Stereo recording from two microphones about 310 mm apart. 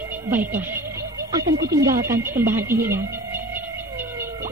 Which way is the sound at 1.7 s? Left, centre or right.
Centre.